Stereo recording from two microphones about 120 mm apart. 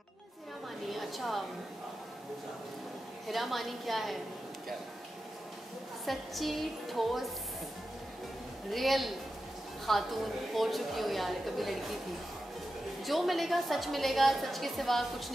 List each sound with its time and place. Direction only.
0.8 s a sound: centre (ahead or behind)
3.3 s a woman's voice: centre (ahead or behind)
6.0 s a woman's voice: centre (ahead or behind)
8.6 s a woman's voice: centre (ahead or behind)
13.0 s a woman's voice: centre (ahead or behind)